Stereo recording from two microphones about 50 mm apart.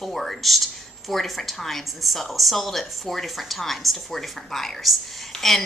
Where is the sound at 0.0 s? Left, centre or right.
Centre.